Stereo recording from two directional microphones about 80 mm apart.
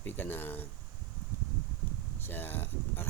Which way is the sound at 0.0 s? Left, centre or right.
Left.